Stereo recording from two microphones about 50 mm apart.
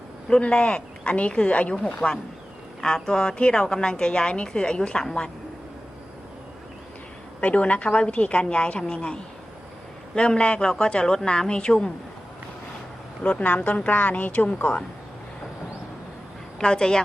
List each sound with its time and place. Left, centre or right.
0.3 s a woman's voice: centre
7.4 s a woman's voice: left
10.2 s a woman's voice: centre
13.2 s a woman's voice: left
16.6 s a woman's voice: centre